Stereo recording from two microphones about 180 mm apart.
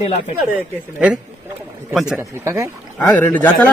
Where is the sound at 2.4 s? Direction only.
15° right (ahead or behind).